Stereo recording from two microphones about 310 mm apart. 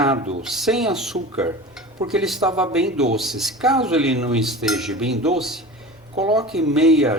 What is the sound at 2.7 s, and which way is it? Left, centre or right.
Cutlery, centre.